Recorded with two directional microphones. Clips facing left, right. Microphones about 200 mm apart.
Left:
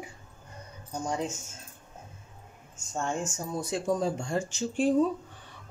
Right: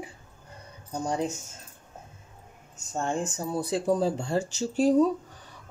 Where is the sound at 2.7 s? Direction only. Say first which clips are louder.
Right 2 dB; 35° right (ahead or behind).